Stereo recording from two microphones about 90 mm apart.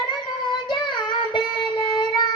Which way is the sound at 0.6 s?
60° left (ahead or behind).